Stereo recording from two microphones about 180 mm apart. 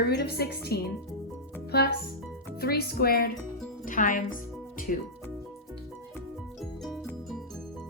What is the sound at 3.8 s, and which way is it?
Speech, 45° left (ahead or behind).